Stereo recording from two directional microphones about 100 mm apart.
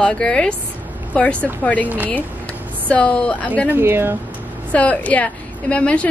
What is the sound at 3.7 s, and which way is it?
Speech, 25° right (ahead or behind).